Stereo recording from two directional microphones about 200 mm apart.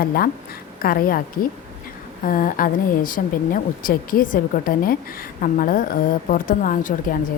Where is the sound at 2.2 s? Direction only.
45° left (ahead or behind).